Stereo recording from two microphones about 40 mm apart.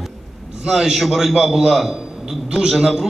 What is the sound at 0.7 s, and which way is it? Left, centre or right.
A man's voice, centre.